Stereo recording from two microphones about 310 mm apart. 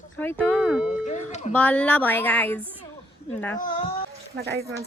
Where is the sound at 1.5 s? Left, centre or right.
Centre.